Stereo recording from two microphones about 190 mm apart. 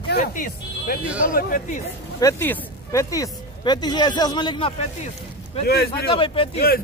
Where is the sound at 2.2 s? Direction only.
10° left (ahead or behind); by 5.1 s 30° left (ahead or behind).